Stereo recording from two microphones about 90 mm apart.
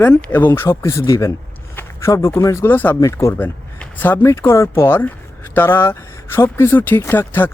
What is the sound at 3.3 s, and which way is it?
Speech, 20° left (ahead or behind).